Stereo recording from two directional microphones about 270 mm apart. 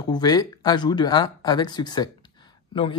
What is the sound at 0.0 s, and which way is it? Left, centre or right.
Speech, centre.